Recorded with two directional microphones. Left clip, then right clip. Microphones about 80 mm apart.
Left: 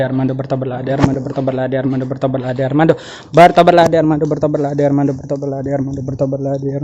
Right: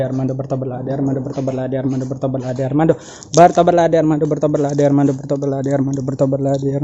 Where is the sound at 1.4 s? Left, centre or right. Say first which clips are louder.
Left 7 dB; centre.